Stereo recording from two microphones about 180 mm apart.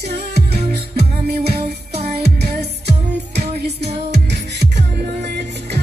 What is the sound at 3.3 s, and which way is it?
Music, 35° right (ahead or behind).